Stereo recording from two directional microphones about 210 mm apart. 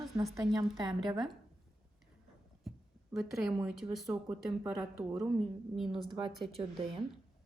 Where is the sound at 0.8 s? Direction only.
20° right (ahead or behind).